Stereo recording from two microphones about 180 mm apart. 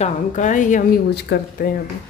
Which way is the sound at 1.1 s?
60° left (ahead or behind).